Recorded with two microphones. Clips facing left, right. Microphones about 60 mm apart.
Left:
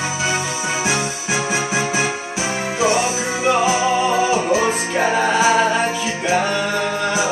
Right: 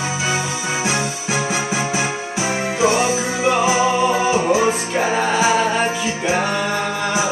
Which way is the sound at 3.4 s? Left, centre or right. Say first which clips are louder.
Even; right.